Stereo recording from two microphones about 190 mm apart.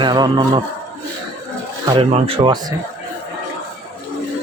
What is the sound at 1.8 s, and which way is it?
Speech, 25° right (ahead or behind).